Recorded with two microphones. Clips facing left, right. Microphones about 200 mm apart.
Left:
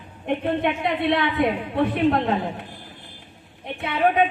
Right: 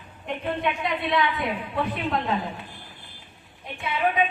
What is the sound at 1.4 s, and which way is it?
Speech, 55° left (ahead or behind).